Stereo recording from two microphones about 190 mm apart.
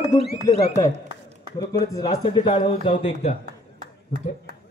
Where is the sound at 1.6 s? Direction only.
20° left (ahead or behind).